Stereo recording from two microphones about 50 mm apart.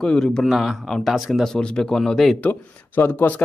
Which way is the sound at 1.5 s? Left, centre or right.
Centre.